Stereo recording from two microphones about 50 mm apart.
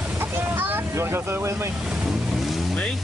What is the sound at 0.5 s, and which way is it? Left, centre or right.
Vehicle, right.